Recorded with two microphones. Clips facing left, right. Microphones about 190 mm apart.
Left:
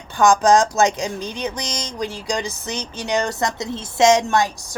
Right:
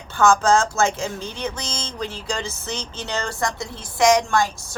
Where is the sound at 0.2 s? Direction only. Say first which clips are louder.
Left 3 dB; 15° left (ahead or behind).